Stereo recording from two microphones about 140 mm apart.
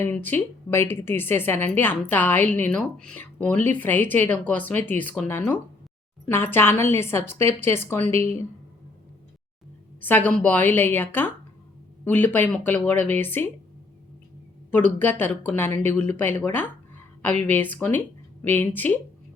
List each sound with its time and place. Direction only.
0.0 s a woman's voice: 15° left (ahead or behind)
10.0 s a woman's voice: 10° left (ahead or behind)
14.9 s a woman's voice: 15° left (ahead or behind)